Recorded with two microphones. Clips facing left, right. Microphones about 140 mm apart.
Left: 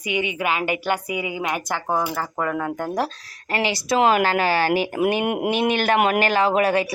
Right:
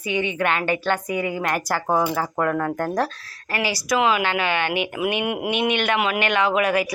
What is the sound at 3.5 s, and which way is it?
Speech, 25° left (ahead or behind).